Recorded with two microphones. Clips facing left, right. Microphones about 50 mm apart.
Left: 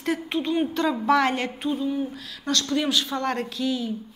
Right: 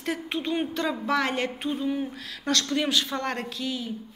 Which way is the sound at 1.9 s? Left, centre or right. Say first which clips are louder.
Left 1 dB; right.